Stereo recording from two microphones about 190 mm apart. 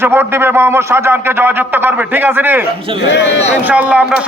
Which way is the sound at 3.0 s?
65° left (ahead or behind).